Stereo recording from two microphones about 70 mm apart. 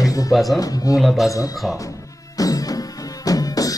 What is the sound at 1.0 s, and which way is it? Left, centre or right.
Speech, centre.